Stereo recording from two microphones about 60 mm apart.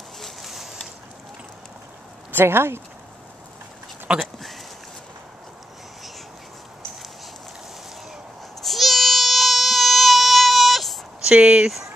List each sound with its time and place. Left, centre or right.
0.2 s a sound: centre
2.3 s speech: right
4.1 s speech: centre
8.5 s baby cry: centre
11.2 s speech: centre